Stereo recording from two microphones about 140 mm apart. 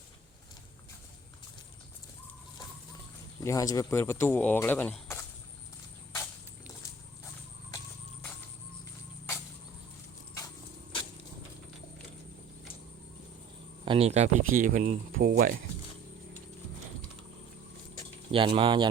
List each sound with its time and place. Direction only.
3.4 s speech: 25° left (ahead or behind)
13.8 s speech: 40° right (ahead or behind)
14.5 s speech: 70° right (ahead or behind); by 15.5 s 90° right
18.3 s speech: 40° right (ahead or behind)